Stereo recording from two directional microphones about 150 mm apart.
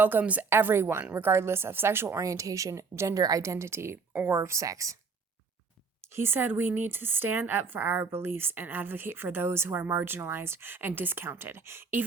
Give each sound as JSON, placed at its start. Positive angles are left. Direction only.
{"t": 0.0, "sound": "speech", "side_deg": -10}
{"t": 6.0, "sound": "speech", "side_deg": -15}